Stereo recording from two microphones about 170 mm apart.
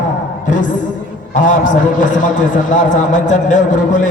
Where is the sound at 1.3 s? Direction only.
50° left (ahead or behind).